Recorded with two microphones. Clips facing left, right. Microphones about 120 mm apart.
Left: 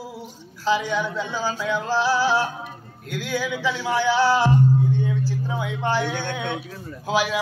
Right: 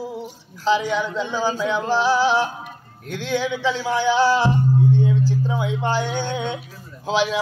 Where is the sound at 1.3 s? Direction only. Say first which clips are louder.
Right 5 dB; 15° right (ahead or behind).